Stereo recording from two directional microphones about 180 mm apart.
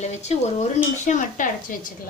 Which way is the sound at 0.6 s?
45° left (ahead or behind).